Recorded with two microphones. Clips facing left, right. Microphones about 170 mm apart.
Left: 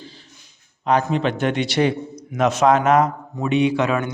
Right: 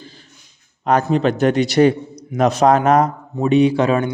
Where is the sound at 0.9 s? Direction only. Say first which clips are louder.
Right 3 dB; 45° right (ahead or behind).